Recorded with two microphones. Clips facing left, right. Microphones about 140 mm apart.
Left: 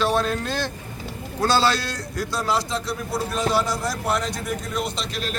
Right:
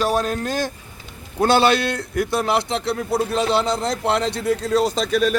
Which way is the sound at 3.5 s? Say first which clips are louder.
Right 3 dB; 25° right (ahead or behind).